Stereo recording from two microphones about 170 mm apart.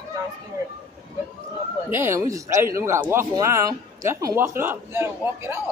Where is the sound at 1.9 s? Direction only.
15° right (ahead or behind).